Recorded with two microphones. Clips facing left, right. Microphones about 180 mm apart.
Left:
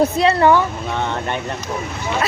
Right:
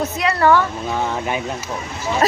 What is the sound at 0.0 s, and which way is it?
Speech, 30° left (ahead or behind).